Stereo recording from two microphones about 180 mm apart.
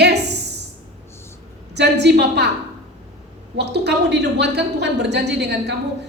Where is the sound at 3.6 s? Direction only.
70° right (ahead or behind).